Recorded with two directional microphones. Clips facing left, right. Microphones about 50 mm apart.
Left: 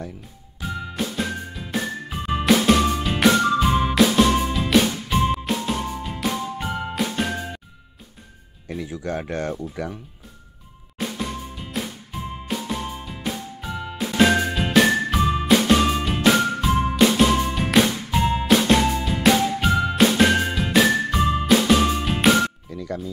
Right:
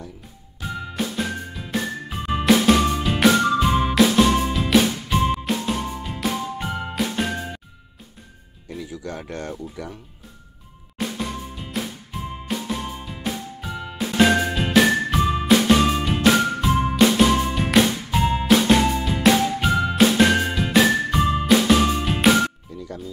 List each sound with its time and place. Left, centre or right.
0.6 s music: centre
8.6 s music: left
9.1 s speech: left
11.0 s music: centre